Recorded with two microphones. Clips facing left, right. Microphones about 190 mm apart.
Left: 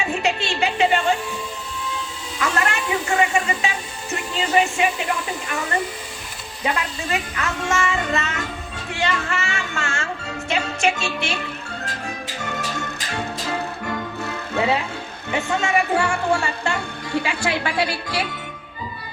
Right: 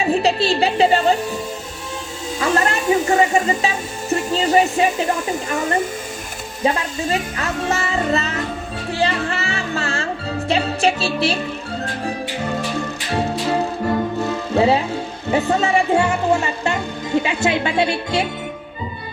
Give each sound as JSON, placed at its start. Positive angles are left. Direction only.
{"t": 0.0, "sound": "speech", "side_deg": -35}
{"t": 2.4, "sound": "speech", "side_deg": -25}
{"t": 2.7, "sound": "speech", "side_deg": -40}
{"t": 6.7, "sound": "speech", "side_deg": -35}
{"t": 12.0, "sound": "music", "side_deg": -35}
{"t": 15.3, "sound": "speech", "side_deg": -35}